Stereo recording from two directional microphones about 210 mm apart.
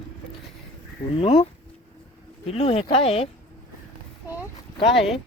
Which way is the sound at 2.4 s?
30° left (ahead or behind).